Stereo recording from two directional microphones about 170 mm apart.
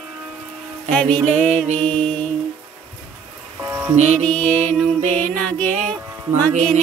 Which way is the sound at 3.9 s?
40° right (ahead or behind).